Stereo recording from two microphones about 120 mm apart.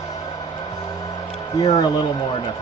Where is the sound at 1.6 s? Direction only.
35° left (ahead or behind).